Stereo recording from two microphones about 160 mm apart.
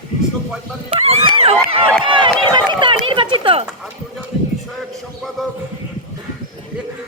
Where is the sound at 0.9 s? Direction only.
40° right (ahead or behind).